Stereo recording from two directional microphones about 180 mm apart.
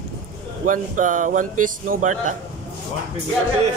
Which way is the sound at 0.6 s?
45° right (ahead or behind).